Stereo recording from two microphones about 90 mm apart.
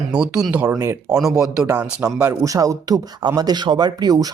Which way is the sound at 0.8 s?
40° right (ahead or behind).